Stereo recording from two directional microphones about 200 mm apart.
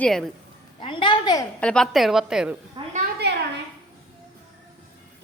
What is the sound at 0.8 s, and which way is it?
Speech, 25° left (ahead or behind).